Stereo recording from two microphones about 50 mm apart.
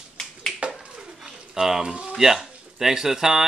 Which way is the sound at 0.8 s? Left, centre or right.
Centre.